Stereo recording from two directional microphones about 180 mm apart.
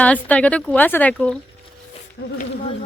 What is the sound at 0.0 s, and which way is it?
Speech, 10° left (ahead or behind).